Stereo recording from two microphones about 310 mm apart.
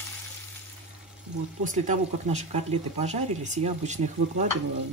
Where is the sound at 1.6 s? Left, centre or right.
Right.